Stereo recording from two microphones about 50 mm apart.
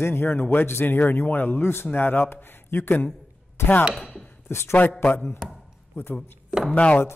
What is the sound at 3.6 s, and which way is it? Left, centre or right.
Chopping, left.